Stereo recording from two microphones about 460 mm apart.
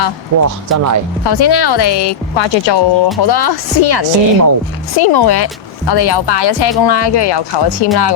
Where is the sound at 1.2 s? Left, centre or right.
Left.